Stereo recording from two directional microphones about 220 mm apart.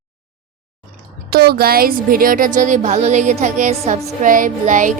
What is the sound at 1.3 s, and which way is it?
Speech, 45° right (ahead or behind).